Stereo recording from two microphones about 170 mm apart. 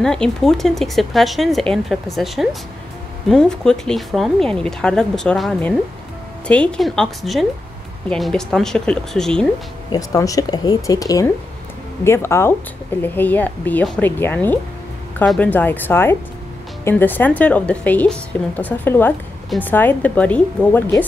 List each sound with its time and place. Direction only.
0.0 s speech: 5° left (ahead or behind)
9.8 s a woman's voice: 20° left (ahead or behind)